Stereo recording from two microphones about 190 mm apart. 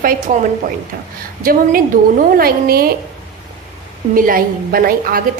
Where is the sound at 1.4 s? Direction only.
50° right (ahead or behind).